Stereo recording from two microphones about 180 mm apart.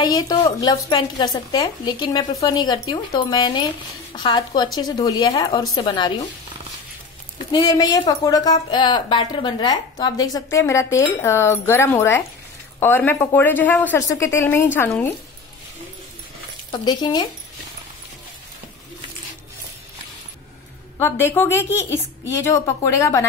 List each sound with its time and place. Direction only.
0.0 s a woman's voice: 20° left (ahead or behind)
7.5 s a woman's voice: 20° left (ahead or behind)
16.8 s a woman's voice: 25° left (ahead or behind)
21.0 s speech: 15° left (ahead or behind)